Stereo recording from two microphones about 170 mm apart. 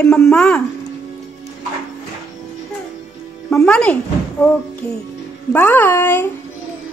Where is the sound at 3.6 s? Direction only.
5° left (ahead or behind).